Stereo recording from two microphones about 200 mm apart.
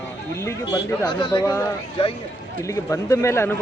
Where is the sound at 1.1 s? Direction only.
25° left (ahead or behind).